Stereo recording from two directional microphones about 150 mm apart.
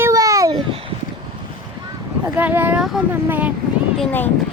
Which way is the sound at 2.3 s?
10° right (ahead or behind).